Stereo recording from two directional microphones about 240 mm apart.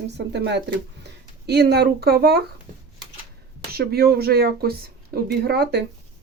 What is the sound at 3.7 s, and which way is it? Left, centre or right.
Speech, right.